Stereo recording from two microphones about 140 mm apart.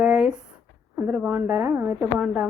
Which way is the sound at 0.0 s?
5° right (ahead or behind).